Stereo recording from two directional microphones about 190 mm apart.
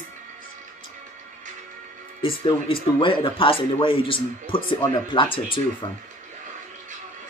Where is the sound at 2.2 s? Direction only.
25° left (ahead or behind).